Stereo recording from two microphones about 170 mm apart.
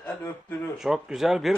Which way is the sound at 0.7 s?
5° right (ahead or behind).